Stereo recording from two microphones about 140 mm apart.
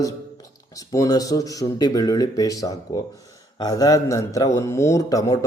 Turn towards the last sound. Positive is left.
turn(degrees=25)  # may be behind; listen again after turning